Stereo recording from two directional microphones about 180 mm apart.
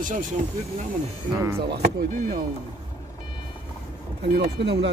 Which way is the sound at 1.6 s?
65° right (ahead or behind).